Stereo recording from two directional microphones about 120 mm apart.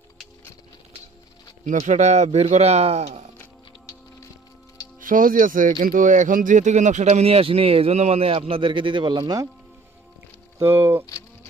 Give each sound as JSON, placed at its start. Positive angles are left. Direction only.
{"t": 1.7, "sound": "speech", "side_deg": -85}
{"t": 2.5, "sound": "speech", "side_deg": -65}
{"t": 3.3, "sound": "music", "side_deg": 25}
{"t": 5.1, "sound": "speech", "side_deg": -90}